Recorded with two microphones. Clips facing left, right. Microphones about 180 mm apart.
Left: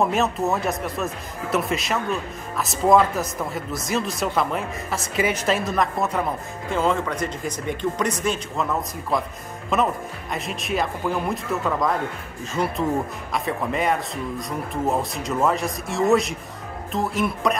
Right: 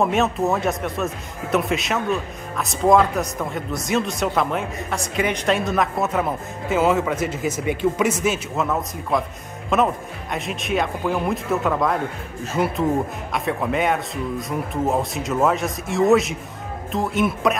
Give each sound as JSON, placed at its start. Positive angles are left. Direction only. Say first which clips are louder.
{"t": 0.0, "sound": "a man's voice", "louder": "right 2 dB", "side_deg": 0}
{"t": 9.7, "sound": "a man's voice", "louder": "right 2 dB", "side_deg": 0}